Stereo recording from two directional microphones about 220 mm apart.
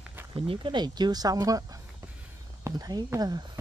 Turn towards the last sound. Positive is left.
turn(degrees=-15)  # may be behind; listen again after turning